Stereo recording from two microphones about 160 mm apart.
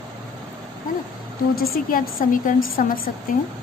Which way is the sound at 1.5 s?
65° left (ahead or behind).